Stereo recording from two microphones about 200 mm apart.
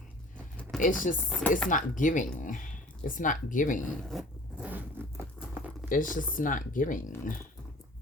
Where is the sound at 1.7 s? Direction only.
40° left (ahead or behind).